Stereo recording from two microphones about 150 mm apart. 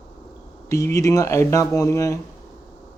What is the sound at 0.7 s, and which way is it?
Speech, 20° left (ahead or behind).